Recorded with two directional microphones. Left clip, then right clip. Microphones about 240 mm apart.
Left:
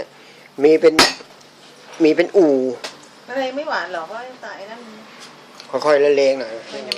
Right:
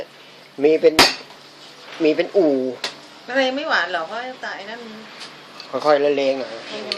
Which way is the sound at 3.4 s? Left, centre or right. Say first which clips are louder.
Right 3 dB; right.